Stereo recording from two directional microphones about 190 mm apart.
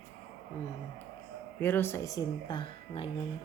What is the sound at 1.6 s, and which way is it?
Speech, 10° left (ahead or behind).